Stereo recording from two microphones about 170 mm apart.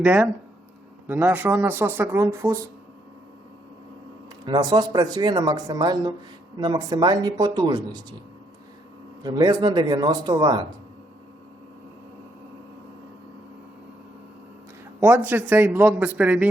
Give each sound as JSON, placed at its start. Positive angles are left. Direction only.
{"t": 0.0, "sound": "speech", "side_deg": -10}
{"t": 4.4, "sound": "speech", "side_deg": -25}
{"t": 9.2, "sound": "speech", "side_deg": -25}
{"t": 15.0, "sound": "speech", "side_deg": -10}